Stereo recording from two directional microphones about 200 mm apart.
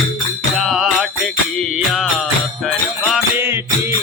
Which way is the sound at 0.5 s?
Centre (ahead or behind).